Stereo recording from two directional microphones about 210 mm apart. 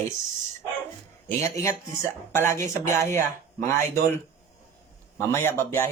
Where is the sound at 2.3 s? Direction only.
10° left (ahead or behind).